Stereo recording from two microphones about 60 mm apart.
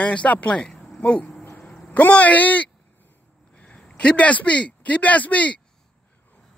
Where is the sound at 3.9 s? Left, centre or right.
Left.